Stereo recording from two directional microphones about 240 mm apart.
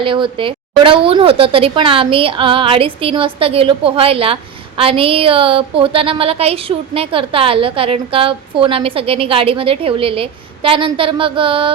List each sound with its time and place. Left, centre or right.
0.0 s a woman's voice: right